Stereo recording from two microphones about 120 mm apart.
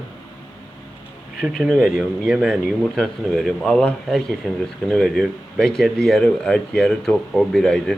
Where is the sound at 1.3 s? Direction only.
Centre (ahead or behind).